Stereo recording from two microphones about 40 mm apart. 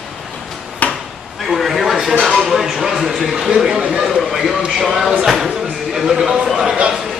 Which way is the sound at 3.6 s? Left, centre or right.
Centre.